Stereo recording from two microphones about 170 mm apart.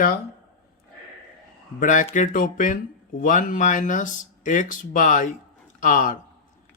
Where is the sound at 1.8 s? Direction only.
50° left (ahead or behind).